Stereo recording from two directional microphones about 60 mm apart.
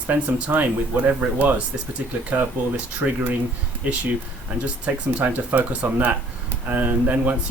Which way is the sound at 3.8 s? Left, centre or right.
Right.